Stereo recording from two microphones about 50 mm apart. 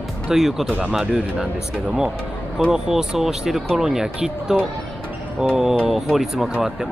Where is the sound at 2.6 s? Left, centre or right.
Centre.